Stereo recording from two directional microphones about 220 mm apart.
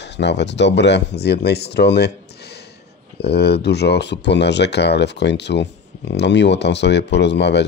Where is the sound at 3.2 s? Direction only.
50° left (ahead or behind).